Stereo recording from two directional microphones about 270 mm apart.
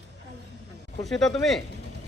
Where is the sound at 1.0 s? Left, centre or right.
Centre.